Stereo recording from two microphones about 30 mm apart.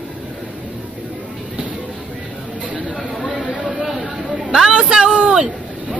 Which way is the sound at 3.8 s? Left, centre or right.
Centre.